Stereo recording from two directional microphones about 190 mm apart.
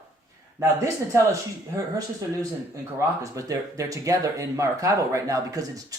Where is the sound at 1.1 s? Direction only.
15° right (ahead or behind).